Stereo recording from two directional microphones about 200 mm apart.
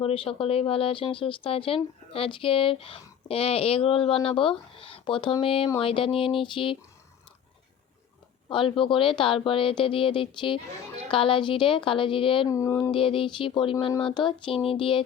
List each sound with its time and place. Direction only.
0.0 s speech: 25° left (ahead or behind)
8.4 s speech: 25° left (ahead or behind)
12.5 s speech: 15° left (ahead or behind)